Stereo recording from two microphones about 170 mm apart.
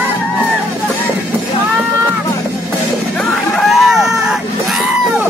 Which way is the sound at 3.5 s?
Centre (ahead or behind).